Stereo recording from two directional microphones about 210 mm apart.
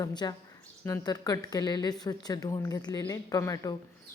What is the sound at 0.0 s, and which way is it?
Speech, 20° left (ahead or behind).